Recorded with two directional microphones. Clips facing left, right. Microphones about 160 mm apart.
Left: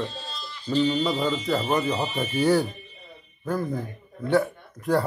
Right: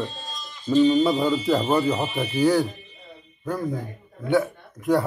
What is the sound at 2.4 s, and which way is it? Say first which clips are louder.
Speech: right 1 dB; centre (ahead or behind).